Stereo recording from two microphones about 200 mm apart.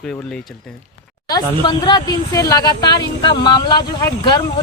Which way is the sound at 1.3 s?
20° left (ahead or behind).